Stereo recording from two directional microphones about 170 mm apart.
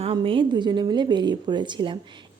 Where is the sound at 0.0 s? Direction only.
30° right (ahead or behind).